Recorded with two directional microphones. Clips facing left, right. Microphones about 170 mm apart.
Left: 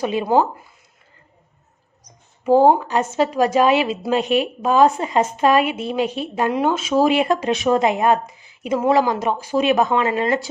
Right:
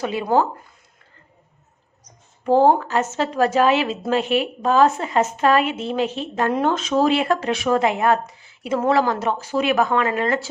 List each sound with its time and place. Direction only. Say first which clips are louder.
0.0 s speech: left 2 dB; 20° left (ahead or behind)
2.4 s speech: left 2 dB; 10° left (ahead or behind)